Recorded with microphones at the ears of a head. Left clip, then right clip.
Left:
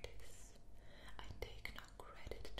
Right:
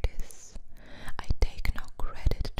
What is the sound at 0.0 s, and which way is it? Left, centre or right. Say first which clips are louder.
Whispering: right 13 dB; right.